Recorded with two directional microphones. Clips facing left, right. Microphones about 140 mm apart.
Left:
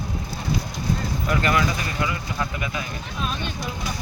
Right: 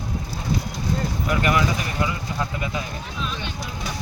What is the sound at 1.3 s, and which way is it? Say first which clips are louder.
Speech: even; 10° right (ahead or behind).